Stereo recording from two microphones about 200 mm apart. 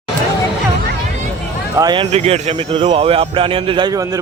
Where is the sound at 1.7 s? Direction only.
20° right (ahead or behind).